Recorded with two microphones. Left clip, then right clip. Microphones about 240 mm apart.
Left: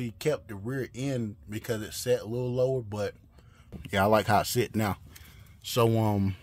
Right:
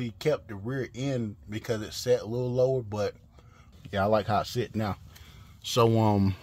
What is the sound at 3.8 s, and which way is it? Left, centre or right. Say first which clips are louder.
Speech: left 2 dB; left.